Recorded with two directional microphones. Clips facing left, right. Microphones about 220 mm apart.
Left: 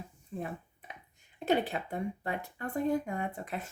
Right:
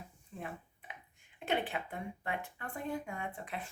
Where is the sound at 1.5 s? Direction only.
40° left (ahead or behind).